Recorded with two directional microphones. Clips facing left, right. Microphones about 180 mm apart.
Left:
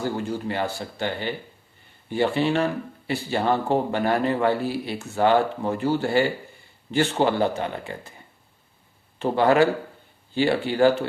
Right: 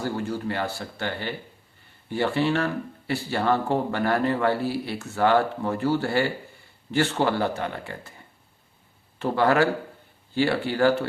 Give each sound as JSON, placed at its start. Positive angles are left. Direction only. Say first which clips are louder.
{"t": 0.0, "sound": "speech", "louder": "left 1 dB", "side_deg": 15}
{"t": 9.1, "sound": "speech", "louder": "left 2 dB", "side_deg": 20}